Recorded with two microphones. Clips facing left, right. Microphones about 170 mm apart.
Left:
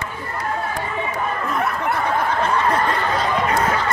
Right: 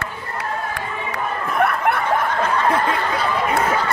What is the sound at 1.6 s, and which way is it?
Snicker, 60° right (ahead or behind).